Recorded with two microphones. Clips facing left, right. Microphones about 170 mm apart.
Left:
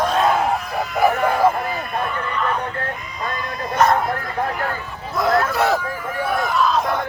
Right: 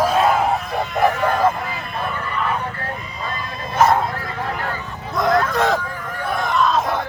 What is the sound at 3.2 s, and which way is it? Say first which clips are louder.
Dog: left 4 dB; 25° right (ahead or behind).